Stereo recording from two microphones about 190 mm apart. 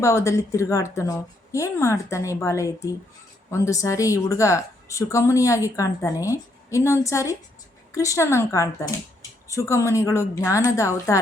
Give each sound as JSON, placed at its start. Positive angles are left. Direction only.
{"t": 0.0, "sound": "a woman's voice", "side_deg": 15}